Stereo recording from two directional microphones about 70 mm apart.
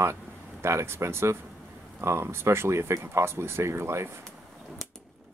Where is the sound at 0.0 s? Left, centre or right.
Right.